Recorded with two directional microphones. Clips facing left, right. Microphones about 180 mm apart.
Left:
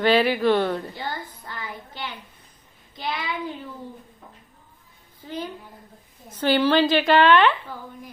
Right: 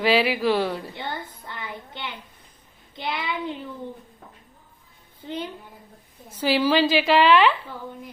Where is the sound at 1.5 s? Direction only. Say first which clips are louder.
Even; 20° right (ahead or behind).